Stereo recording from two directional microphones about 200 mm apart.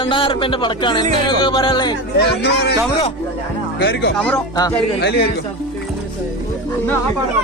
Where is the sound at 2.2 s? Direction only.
55° left (ahead or behind).